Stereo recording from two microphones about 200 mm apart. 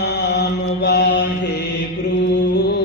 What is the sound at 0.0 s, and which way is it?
Mantra, 60° left (ahead or behind).